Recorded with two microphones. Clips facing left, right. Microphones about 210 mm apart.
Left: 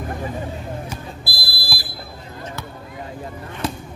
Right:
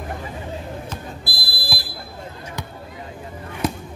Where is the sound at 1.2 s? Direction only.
20° right (ahead or behind).